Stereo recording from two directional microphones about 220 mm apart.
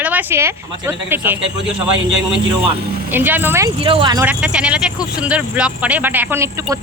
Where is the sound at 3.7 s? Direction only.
25° right (ahead or behind).